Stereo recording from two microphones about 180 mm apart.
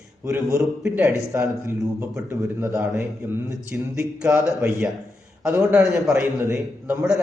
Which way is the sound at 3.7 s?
5° right (ahead or behind).